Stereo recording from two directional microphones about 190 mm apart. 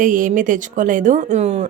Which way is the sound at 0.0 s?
45° right (ahead or behind).